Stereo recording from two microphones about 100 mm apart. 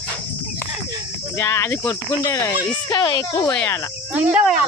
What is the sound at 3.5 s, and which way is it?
Insect, 20° left (ahead or behind).